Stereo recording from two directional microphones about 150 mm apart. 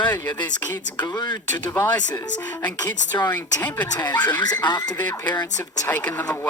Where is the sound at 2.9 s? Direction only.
30° left (ahead or behind).